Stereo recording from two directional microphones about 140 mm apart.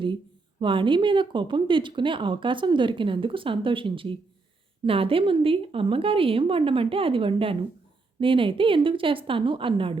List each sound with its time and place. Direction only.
0.6 s speech: 35° right (ahead or behind)